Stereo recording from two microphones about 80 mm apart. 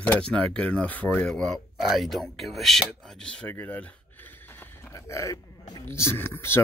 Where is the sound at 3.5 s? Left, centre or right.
Left.